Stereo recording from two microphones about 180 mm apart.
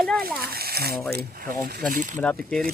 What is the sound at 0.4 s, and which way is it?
Speech, 60° right (ahead or behind).